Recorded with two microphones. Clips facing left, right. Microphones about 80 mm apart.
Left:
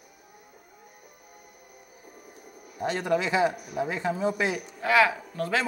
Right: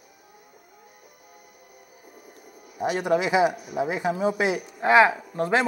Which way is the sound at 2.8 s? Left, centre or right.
Centre.